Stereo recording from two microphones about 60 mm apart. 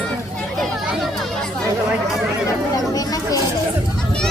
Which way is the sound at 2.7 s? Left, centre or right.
Left.